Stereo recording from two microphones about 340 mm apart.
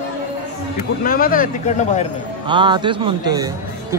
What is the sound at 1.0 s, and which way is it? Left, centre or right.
Speech, left.